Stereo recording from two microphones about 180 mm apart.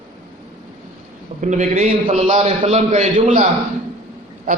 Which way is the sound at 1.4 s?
45° right (ahead or behind).